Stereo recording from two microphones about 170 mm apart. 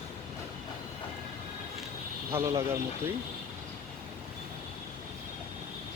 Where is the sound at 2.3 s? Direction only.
15° right (ahead or behind).